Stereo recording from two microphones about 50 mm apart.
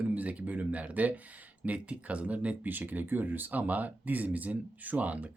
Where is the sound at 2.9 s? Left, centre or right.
Right.